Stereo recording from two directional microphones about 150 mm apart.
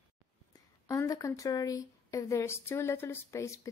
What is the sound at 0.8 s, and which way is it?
Speech, 20° left (ahead or behind).